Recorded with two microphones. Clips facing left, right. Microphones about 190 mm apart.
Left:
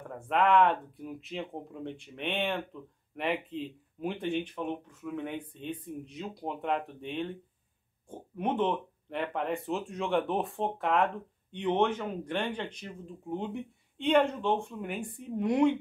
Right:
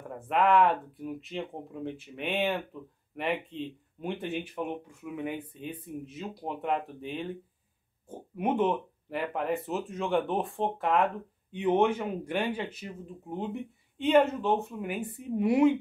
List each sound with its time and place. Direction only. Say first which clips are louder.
0.1 s speech: right 1 dB; centre (ahead or behind)